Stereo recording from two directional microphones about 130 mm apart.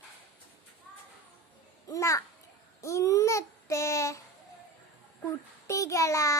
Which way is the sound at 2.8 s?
25° left (ahead or behind).